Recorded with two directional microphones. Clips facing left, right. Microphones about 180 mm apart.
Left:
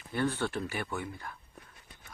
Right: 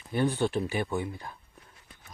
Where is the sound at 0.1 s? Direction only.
15° right (ahead or behind).